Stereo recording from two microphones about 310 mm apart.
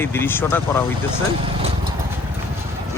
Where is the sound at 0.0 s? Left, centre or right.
Centre.